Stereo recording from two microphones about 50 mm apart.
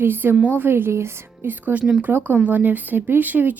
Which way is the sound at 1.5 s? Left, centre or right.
Right.